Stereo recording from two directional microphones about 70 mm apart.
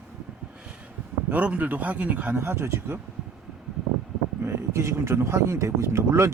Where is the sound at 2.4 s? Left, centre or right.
Right.